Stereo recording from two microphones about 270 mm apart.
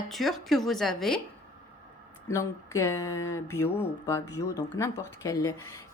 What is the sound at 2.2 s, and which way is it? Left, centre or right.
Speech, centre.